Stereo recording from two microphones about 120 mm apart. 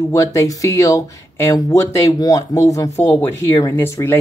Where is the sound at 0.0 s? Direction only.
25° left (ahead or behind).